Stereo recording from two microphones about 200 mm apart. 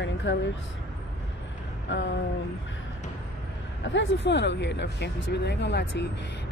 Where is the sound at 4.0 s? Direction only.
60° left (ahead or behind).